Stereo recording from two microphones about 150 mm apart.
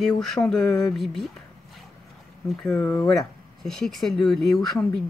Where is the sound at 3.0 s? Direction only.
Centre (ahead or behind).